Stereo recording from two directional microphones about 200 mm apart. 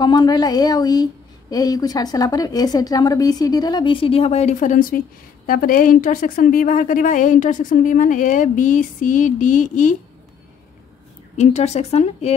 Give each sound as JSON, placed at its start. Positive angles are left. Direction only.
{"t": 0.0, "sound": "a woman's voice", "side_deg": 20}
{"t": 11.3, "sound": "a woman's voice", "side_deg": 35}